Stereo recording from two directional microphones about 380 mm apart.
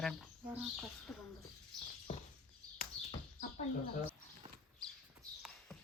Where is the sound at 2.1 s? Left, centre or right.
Centre.